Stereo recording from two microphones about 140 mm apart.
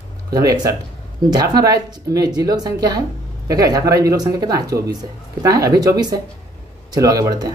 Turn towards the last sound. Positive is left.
turn(degrees=-25)  # may be behind; listen again after turning